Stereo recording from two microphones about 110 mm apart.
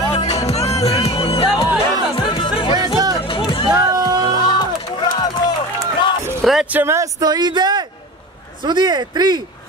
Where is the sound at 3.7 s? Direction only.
35° right (ahead or behind).